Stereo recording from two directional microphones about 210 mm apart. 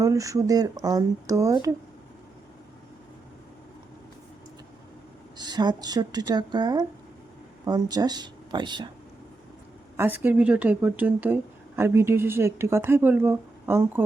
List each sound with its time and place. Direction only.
0.0 s speech: 15° right (ahead or behind)
5.4 s speech: 20° right (ahead or behind)
10.0 s speech: 10° right (ahead or behind)